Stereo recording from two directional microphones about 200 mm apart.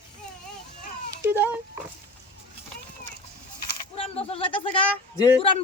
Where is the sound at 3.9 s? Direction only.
30° left (ahead or behind).